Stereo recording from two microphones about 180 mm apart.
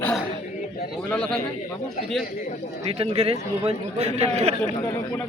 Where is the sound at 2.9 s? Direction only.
30° right (ahead or behind).